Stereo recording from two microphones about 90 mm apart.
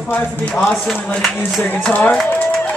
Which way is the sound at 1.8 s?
20° left (ahead or behind).